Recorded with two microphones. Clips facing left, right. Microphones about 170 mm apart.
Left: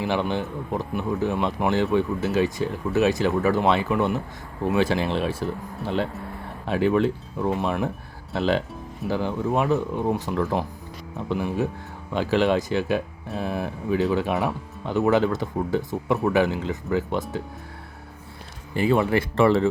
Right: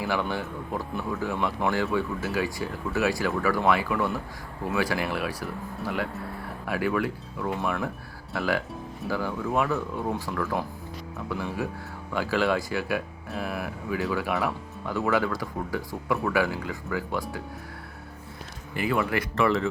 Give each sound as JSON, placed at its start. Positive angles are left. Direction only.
{"t": 0.0, "sound": "speech", "side_deg": 20}
{"t": 18.7, "sound": "speech", "side_deg": 25}